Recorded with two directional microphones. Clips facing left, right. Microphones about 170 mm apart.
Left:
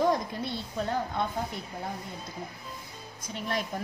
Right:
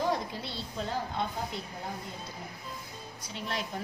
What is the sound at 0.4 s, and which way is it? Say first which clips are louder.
Speech: left 4 dB; 55° left (ahead or behind).